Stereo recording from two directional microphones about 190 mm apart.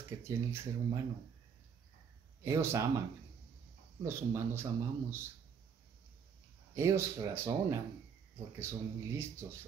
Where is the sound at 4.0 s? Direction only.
15° right (ahead or behind).